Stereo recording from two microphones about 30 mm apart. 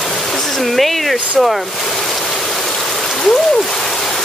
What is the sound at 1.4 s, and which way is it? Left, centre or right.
Speech, centre.